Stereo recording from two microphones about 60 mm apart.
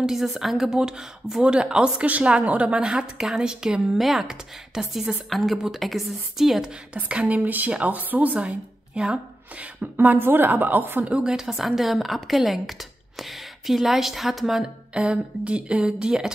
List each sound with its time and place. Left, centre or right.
0.0 s a woman's voice: centre
6.9 s speech: right
8.5 s speech: centre
9.9 s a woman's voice: right
11.1 s a woman's voice: centre
15.0 s speech: centre